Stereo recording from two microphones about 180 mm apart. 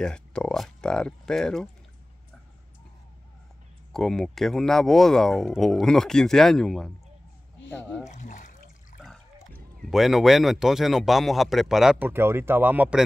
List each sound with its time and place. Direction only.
0.0 s speech: 5° left (ahead or behind)
3.9 s speech: centre (ahead or behind)
8.0 s speech: 40° left (ahead or behind)
9.0 s speech: 5° left (ahead or behind)